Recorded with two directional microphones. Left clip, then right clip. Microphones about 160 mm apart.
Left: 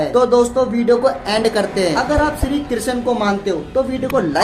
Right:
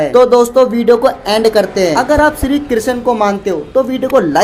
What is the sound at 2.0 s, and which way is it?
A woman's voice, 45° right (ahead or behind).